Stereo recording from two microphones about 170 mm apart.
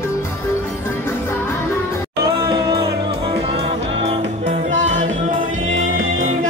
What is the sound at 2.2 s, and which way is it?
Music, 25° right (ahead or behind).